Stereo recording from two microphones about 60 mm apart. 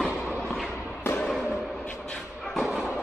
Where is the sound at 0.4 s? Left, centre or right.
Centre.